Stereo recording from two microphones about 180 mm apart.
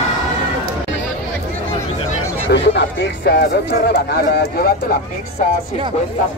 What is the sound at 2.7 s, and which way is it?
Run, 65° left (ahead or behind).